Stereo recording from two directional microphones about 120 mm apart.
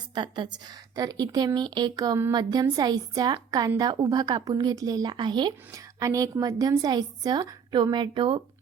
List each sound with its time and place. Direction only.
0.1 s a woman's voice: 40° right (ahead or behind)
5.7 s a woman's voice: 25° right (ahead or behind)